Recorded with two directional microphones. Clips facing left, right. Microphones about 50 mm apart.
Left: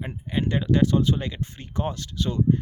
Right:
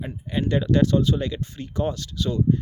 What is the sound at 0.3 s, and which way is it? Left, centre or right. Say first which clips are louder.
Speech: right 1 dB; centre.